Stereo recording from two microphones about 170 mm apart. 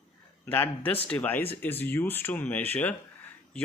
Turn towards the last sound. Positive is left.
turn(degrees=10)  # may be behind; listen again after turning